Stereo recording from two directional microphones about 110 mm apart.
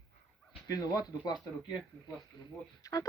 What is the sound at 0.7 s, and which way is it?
Speech, 35° left (ahead or behind).